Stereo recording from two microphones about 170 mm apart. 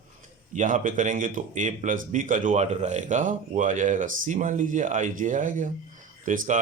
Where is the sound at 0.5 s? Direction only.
50° right (ahead or behind).